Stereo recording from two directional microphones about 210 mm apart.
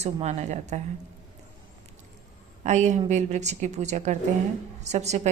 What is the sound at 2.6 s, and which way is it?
A woman's voice, 35° right (ahead or behind).